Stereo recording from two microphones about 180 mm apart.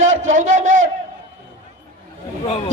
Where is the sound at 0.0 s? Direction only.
45° right (ahead or behind).